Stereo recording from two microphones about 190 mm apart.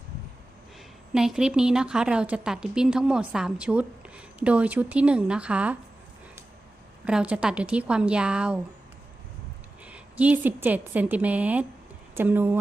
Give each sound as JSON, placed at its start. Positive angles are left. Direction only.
{"t": 1.1, "sound": "a woman's voice", "side_deg": -5}
{"t": 7.0, "sound": "a woman's voice", "side_deg": -5}
{"t": 9.8, "sound": "a woman's voice", "side_deg": -5}